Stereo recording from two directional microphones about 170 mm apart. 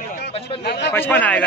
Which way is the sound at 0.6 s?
80° left.